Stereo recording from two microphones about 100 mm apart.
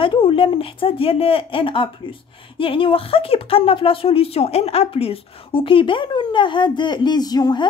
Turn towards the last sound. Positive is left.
turn(degrees=40)  # may be behind; listen again after turning